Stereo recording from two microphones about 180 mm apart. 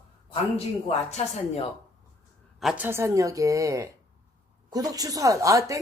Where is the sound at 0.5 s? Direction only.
35° left (ahead or behind).